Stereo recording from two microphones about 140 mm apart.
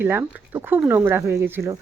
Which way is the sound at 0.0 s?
15° right (ahead or behind).